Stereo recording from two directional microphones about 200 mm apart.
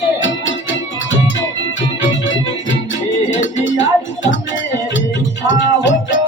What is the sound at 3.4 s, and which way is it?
Music, 70° left (ahead or behind).